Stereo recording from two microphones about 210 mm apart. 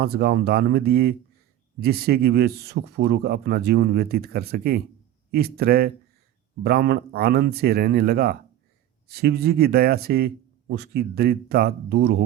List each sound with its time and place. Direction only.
0.0 s a man's voice: 50° right (ahead or behind)